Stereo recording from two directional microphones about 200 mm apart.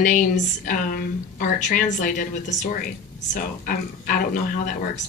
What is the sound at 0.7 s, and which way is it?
A woman's voice, 45° left (ahead or behind).